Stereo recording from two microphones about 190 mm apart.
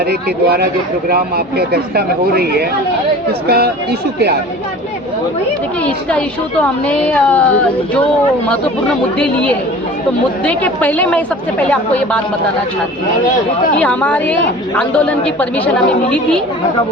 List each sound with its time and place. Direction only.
0.1 s speech: 55° right (ahead or behind)
5.8 s a woman's voice: 5° left (ahead or behind)
9.1 s a woman's voice: 5° left (ahead or behind)
13.7 s a woman's voice: 10° left (ahead or behind)